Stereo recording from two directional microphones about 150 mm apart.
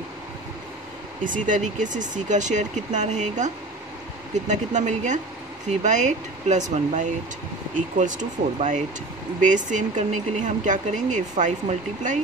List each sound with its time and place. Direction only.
1.2 s speech: 60° right (ahead or behind)